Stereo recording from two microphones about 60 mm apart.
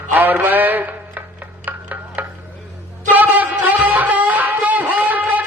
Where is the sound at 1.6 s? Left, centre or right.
Right.